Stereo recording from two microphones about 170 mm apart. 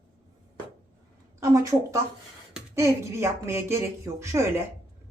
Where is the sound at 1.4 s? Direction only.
20° right (ahead or behind).